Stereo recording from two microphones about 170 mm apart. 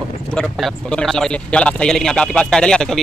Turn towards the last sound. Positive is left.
turn(degrees=5)  # may be behind; listen again after turning